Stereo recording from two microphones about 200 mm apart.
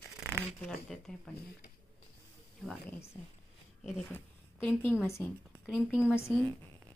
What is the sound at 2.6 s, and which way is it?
Speech, centre (ahead or behind).